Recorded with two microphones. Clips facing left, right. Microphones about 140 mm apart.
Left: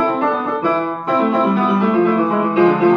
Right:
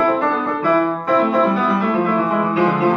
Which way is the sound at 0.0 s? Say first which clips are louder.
Even; 20° left (ahead or behind).